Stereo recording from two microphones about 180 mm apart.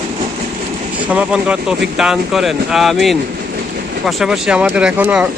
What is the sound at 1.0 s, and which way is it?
Speech, 5° right (ahead or behind).